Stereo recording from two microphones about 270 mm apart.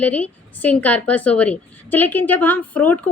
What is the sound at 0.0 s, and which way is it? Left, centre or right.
A woman's voice, centre.